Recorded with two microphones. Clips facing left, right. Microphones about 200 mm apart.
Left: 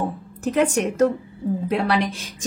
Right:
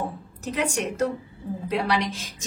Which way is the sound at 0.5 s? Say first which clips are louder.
Left 7 dB; 50° left (ahead or behind).